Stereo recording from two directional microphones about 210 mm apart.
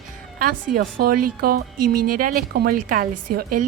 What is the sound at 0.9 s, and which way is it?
A woman's voice, 45° right (ahead or behind).